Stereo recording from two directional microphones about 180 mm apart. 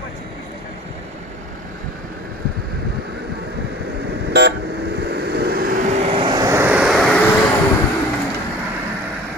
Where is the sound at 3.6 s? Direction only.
70° right (ahead or behind); by 7.3 s 5° left (ahead or behind).